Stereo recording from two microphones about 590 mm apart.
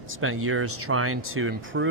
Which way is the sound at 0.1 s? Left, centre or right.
Right.